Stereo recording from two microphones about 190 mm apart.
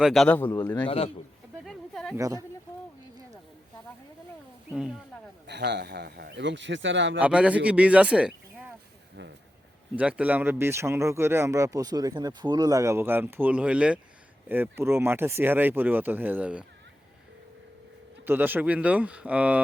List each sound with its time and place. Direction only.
0.0 s a man's voice: centre (ahead or behind)
0.9 s a man's voice: 30° left (ahead or behind)
1.6 s a sound: centre (ahead or behind)
2.1 s speech: 15° right (ahead or behind)
5.5 s speech: 65° right (ahead or behind)
7.2 s speech: 5° right (ahead or behind)
9.9 s speech: 5° right (ahead or behind)
18.3 s speech: 10° right (ahead or behind)